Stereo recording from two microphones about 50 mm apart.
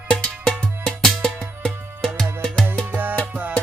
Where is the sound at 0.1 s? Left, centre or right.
Left.